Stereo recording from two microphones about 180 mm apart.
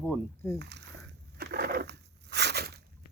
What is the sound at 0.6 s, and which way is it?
Speech, 70° right (ahead or behind).